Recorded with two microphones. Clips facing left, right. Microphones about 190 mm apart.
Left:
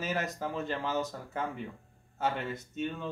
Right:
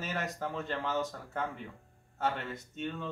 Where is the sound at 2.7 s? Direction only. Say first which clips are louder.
Left 2 dB; 10° left (ahead or behind).